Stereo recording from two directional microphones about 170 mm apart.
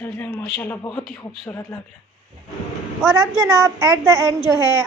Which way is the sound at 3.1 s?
20° right (ahead or behind).